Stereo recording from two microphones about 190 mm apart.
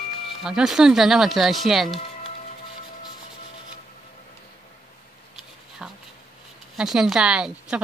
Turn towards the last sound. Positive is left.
turn(degrees=-5)  # may be behind; listen again after turning